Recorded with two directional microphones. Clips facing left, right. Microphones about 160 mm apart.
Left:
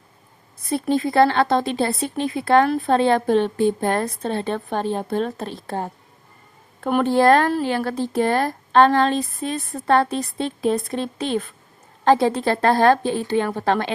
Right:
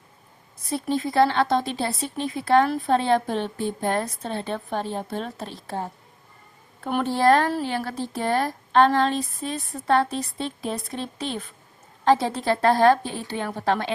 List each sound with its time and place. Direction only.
0.7 s speech: 60° left (ahead or behind)
6.8 s speech: 55° left (ahead or behind)
9.4 s a woman's voice: 90° left
9.8 s speech: 60° left (ahead or behind)
12.0 s a woman's voice: 60° left (ahead or behind)